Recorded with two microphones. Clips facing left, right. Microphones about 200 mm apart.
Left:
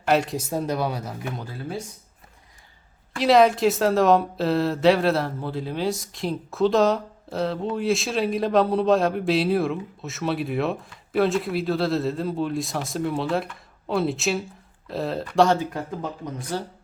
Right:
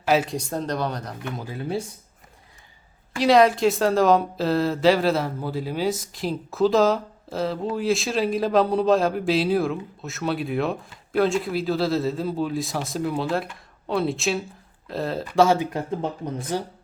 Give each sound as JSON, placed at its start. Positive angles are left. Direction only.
{"t": 0.0, "sound": "speech", "side_deg": -5}
{"t": 1.5, "sound": "speech", "side_deg": -20}
{"t": 3.2, "sound": "speech", "side_deg": 0}
{"t": 15.5, "sound": "speech", "side_deg": -20}